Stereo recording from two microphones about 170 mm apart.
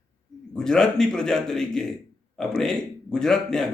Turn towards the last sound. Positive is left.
turn(degrees=5)  # may be behind; listen again after turning